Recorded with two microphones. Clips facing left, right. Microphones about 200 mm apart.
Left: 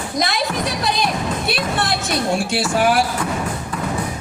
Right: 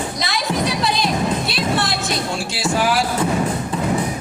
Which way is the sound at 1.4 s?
55° left (ahead or behind).